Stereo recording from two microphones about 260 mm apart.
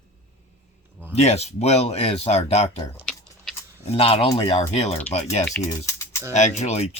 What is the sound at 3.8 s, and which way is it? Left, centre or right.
Speech, left.